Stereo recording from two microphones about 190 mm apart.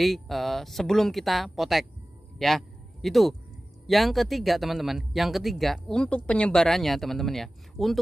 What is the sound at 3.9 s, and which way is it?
Speech, centre (ahead or behind).